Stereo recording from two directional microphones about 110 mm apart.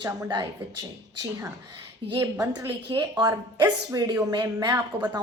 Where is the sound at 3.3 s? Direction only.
30° right (ahead or behind).